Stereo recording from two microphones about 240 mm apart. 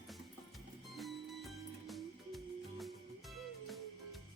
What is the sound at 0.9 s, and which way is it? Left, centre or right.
Music, centre.